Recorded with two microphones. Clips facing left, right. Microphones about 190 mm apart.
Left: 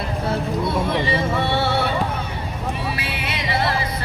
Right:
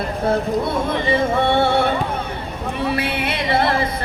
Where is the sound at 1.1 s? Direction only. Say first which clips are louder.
Right 4 dB; 50° right (ahead or behind).